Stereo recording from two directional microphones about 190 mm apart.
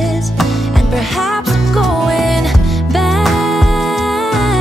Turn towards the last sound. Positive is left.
turn(degrees=0)  # may be behind; listen again after turning